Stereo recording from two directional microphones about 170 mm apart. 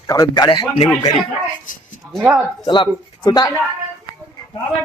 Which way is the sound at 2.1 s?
Centre (ahead or behind).